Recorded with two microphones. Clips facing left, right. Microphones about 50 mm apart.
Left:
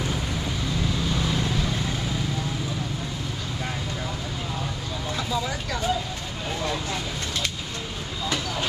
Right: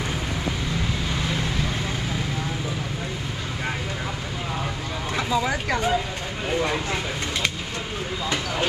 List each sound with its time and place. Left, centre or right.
5.1 s vehicle: right